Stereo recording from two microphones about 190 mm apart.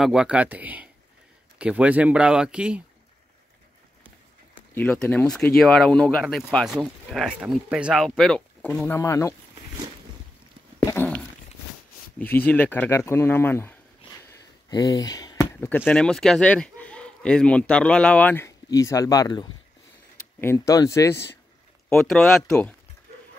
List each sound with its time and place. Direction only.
0.0 s speech: 5° right (ahead or behind)
4.7 s speech: 5° left (ahead or behind)
10.8 s dog: 15° left (ahead or behind)
12.4 s speech: 10° left (ahead or behind)
21.8 s speech: centre (ahead or behind)